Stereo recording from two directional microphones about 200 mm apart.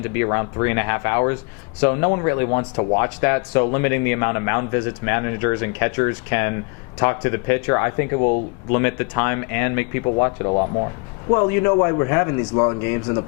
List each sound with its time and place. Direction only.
0.1 s speech: 15° left (ahead or behind)
10.0 s speech: 25° left (ahead or behind)